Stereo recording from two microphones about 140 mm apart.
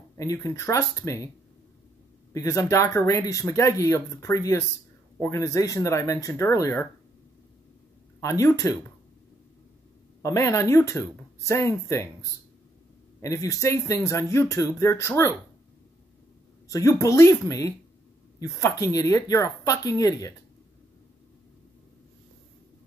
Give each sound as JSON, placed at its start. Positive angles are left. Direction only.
{"t": 0.2, "sound": "speech", "side_deg": 25}
{"t": 2.3, "sound": "speech", "side_deg": 20}
{"t": 8.2, "sound": "speech", "side_deg": 20}
{"t": 10.2, "sound": "speech", "side_deg": 20}
{"t": 16.6, "sound": "speech", "side_deg": 25}